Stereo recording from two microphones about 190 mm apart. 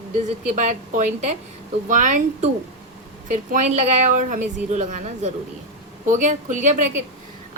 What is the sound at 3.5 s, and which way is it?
A woman's voice, 40° right (ahead or behind).